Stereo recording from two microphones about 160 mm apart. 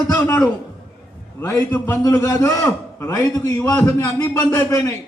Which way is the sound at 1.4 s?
15° left (ahead or behind).